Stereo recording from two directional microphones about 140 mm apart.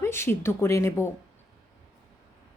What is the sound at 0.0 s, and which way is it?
A woman's voice, 20° left (ahead or behind).